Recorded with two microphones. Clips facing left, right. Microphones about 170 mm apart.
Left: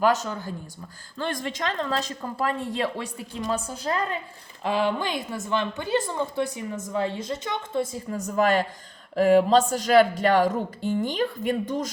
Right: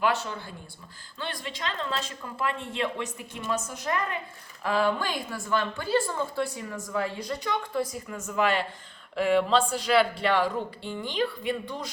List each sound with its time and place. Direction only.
0.0 s a woman's voice: 40° left (ahead or behind)